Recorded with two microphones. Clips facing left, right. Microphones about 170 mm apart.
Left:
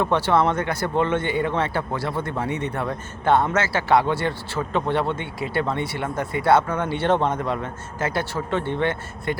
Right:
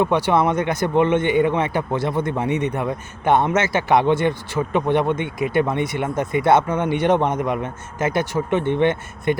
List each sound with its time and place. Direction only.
0.0 s speech: 15° right (ahead or behind)